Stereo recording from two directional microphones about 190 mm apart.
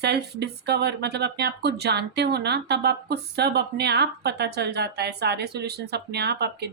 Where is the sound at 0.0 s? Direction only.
60° right (ahead or behind).